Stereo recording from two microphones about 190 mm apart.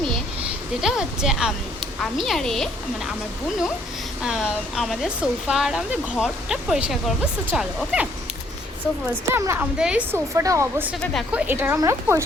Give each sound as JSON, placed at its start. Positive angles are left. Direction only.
{"t": 0.8, "sound": "speech", "side_deg": 0}
{"t": 4.2, "sound": "speech", "side_deg": -5}
{"t": 9.3, "sound": "speech", "side_deg": -10}
{"t": 11.0, "sound": "speech", "side_deg": 0}